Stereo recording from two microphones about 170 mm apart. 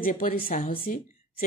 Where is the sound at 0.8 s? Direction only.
55° left (ahead or behind).